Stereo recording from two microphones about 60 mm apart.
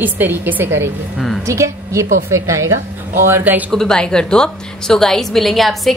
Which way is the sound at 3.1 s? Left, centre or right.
Right.